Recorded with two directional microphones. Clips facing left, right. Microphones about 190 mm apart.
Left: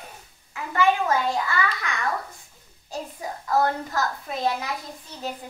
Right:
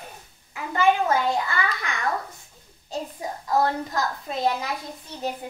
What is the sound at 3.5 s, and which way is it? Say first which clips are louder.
Speech: even; 20° right (ahead or behind).